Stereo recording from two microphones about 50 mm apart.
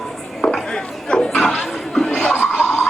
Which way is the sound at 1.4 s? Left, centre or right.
Centre.